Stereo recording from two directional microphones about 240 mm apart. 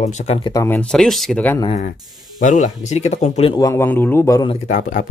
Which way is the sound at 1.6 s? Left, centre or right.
Left.